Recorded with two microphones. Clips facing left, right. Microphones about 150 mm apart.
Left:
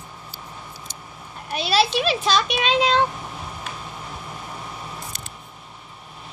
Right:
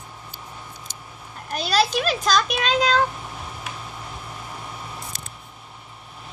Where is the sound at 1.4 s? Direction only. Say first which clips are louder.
Left 1 dB; 5° left (ahead or behind).